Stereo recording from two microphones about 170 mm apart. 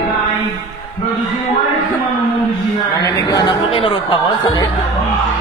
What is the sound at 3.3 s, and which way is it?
Speech, 30° left (ahead or behind).